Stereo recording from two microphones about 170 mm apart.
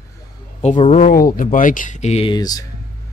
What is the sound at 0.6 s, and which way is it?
Speech, 40° left (ahead or behind).